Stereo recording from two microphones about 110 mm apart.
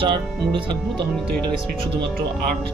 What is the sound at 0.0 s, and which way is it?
Speech, 50° right (ahead or behind).